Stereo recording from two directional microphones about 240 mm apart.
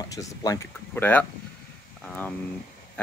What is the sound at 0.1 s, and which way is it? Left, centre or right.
Speech, centre.